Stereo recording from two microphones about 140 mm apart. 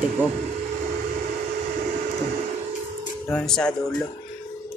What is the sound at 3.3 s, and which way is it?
Speech, 5° left (ahead or behind).